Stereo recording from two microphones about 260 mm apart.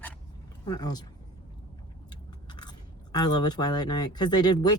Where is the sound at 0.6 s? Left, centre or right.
Centre.